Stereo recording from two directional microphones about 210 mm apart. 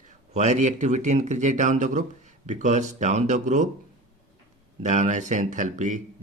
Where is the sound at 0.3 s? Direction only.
35° right (ahead or behind).